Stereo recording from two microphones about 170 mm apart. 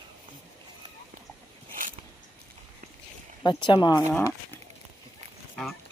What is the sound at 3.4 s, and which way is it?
Speech, 25° left (ahead or behind).